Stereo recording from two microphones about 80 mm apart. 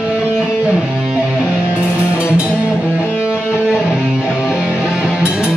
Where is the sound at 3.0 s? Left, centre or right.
Left.